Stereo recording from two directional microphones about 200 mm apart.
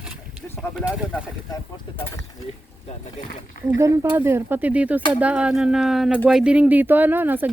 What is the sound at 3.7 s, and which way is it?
Speech, 15° right (ahead or behind).